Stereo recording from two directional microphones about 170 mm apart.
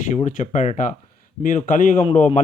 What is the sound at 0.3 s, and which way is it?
A man's voice, 45° left (ahead or behind).